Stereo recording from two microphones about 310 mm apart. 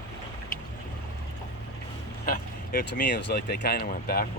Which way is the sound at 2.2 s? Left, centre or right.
Left.